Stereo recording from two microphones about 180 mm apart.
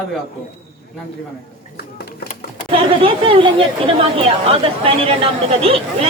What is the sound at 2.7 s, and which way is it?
Speech, 30° right (ahead or behind).